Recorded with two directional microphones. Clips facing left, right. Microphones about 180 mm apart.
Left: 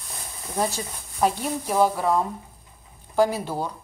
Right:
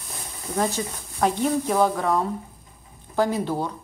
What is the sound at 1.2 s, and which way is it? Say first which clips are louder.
Speech: right 2 dB; 10° left (ahead or behind).